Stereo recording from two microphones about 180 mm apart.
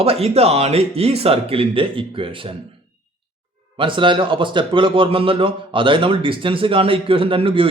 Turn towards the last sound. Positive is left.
turn(degrees=-30)  # may be behind; listen again after turning